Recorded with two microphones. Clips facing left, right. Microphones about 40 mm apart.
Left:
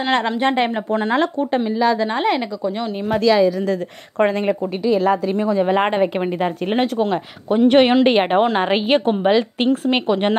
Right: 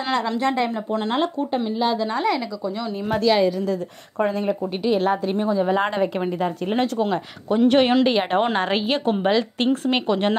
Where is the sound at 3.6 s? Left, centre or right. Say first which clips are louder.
Left 3 dB; left.